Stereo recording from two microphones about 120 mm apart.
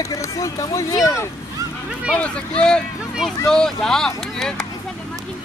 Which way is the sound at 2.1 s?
10° left (ahead or behind).